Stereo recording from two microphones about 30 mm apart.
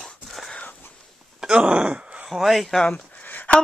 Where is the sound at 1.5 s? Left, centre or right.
Right.